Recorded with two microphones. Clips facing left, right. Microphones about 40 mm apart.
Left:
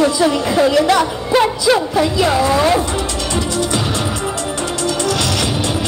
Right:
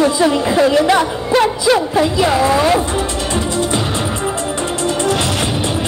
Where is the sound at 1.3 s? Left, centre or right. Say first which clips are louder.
Right 1 dB; centre.